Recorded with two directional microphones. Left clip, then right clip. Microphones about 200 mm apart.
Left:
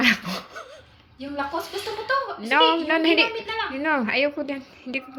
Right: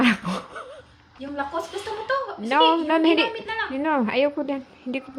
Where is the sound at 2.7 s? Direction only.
25° right (ahead or behind).